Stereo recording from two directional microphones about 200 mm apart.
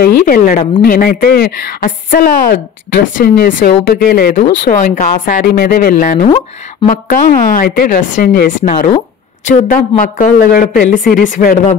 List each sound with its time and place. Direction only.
0.0 s a woman's voice: 45° left (ahead or behind)